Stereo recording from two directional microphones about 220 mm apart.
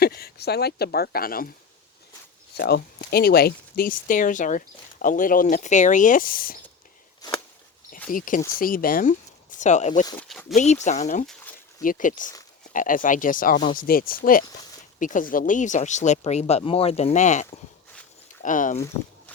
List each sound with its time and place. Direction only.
0.0 s speech: 45° left (ahead or behind)
2.6 s speech: 45° left (ahead or behind)
7.2 s a sound: 20° left (ahead or behind)
8.1 s speech: 40° left (ahead or behind)
10.2 s speech: centre (ahead or behind)
10.5 s speech: 35° left (ahead or behind)
18.4 s speech: 35° left (ahead or behind)